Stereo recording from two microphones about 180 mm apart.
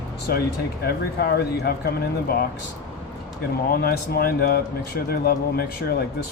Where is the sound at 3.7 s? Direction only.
55° left (ahead or behind).